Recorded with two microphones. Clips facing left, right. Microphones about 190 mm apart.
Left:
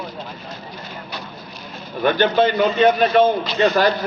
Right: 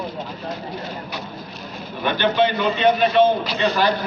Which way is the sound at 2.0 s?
45° left (ahead or behind).